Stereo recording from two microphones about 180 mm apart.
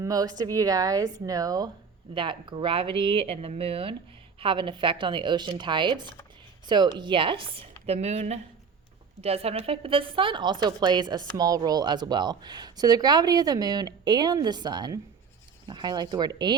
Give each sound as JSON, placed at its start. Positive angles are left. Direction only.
{"t": 0.0, "sound": "a woman's voice", "side_deg": -20}